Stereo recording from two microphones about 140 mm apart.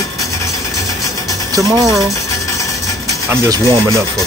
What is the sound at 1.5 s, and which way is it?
Speech, 25° right (ahead or behind).